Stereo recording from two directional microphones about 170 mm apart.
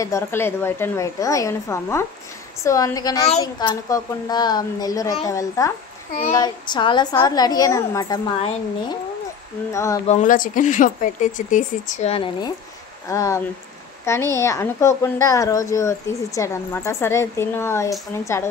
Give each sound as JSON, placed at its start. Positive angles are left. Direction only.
{"t": 0.0, "sound": "a woman's voice", "side_deg": 15}
{"t": 9.7, "sound": "a woman's voice", "side_deg": 15}
{"t": 10.0, "sound": "a woman's voice", "side_deg": 45}